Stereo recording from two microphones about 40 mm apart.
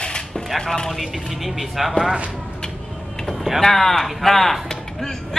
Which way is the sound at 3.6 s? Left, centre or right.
Centre.